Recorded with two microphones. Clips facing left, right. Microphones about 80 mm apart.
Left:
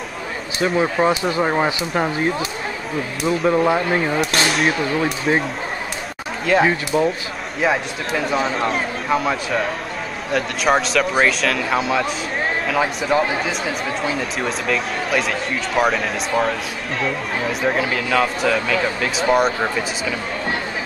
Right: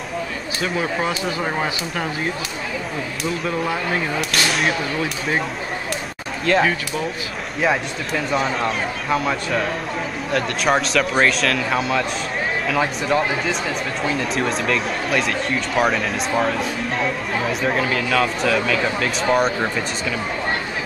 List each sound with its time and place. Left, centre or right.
1.0 s speech: left
3.4 s speech: left
6.5 s speech: centre